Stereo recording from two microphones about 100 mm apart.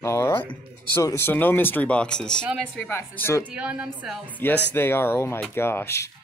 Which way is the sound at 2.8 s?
20° left (ahead or behind).